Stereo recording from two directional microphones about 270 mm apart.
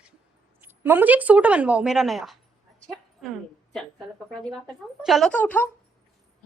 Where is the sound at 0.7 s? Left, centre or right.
Centre.